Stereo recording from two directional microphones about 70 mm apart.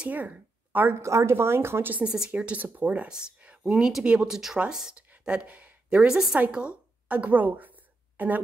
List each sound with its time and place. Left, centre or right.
0.0 s speech: right
1.0 s a woman's voice: right
2.0 s a woman's voice: centre
7.1 s a sound: right